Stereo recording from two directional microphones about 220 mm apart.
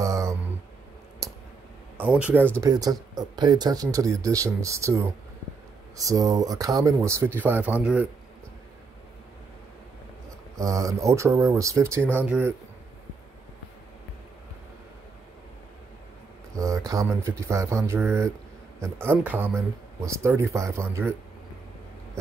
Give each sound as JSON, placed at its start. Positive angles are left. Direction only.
{"t": 0.0, "sound": "a sound", "side_deg": -15}
{"t": 2.0, "sound": "speech", "side_deg": -5}
{"t": 10.5, "sound": "speech", "side_deg": -15}
{"t": 16.5, "sound": "speech", "side_deg": -15}